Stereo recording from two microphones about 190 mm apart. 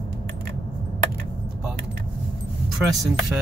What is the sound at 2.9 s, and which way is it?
Speech, centre (ahead or behind).